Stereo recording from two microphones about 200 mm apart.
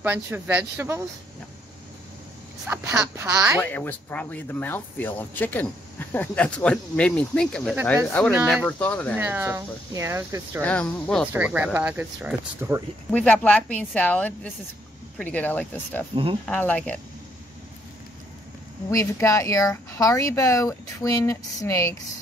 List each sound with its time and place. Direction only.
0.0 s speech: 10° right (ahead or behind)
2.6 s speech: 5° right (ahead or behind)
3.6 s speech: 10° left (ahead or behind)
9.1 s speech: 10° right (ahead or behind)
10.6 s speech: 5° left (ahead or behind)
11.3 s speech: 5° right (ahead or behind)
13.1 s speech: 5° left (ahead or behind)
18.9 s speech: 15° left (ahead or behind)